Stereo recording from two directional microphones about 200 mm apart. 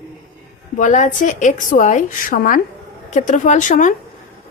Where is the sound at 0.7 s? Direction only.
40° left (ahead or behind).